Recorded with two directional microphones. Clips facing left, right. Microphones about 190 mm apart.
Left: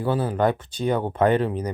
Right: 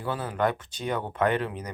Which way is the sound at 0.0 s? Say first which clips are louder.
Left 6 dB; 30° left (ahead or behind).